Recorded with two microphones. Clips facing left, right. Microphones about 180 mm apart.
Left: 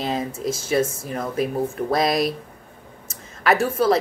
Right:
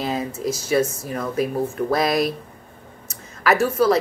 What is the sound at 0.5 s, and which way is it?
Speech, 25° left (ahead or behind).